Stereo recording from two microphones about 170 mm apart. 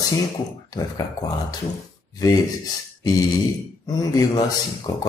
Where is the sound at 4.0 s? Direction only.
20° left (ahead or behind).